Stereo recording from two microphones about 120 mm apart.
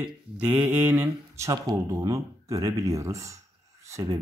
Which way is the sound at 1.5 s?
30° right (ahead or behind).